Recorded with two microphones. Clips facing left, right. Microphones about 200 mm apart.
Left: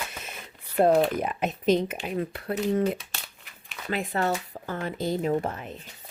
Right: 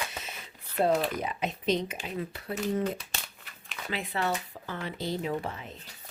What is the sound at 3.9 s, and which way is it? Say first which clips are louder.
Speech: left 4 dB; 45° left (ahead or behind).